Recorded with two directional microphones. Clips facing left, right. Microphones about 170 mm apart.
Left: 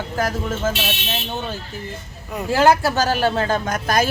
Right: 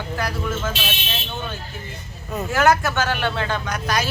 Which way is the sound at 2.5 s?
30° left (ahead or behind).